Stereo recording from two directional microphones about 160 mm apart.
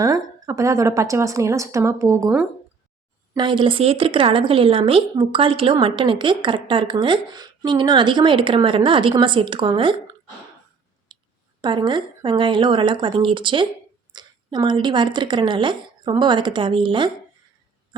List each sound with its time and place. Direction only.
0.0 s speech: 20° right (ahead or behind)
3.3 s speech: 30° right (ahead or behind)
11.1 s clicking: 30° right (ahead or behind)
11.6 s speech: 30° right (ahead or behind)